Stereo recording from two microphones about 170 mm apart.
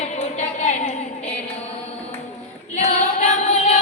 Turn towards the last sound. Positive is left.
turn(degrees=45)  # may be behind; listen again after turning